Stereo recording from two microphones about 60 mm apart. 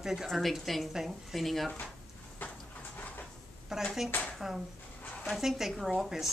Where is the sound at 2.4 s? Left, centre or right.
Left.